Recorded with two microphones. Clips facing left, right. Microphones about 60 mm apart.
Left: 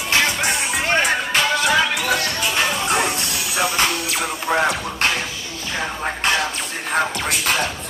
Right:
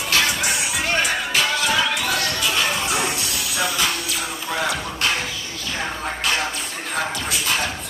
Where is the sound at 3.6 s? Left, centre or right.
Left.